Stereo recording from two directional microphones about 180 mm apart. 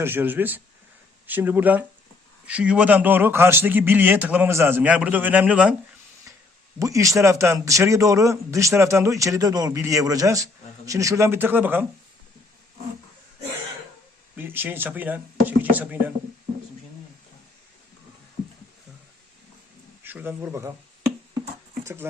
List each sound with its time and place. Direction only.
0.0 s speech: 10° right (ahead or behind)
6.3 s a sound: 15° right (ahead or behind)
6.7 s speech: 20° right (ahead or behind)
14.3 s speech: 10° right (ahead or behind)
20.1 s speech: 10° right (ahead or behind)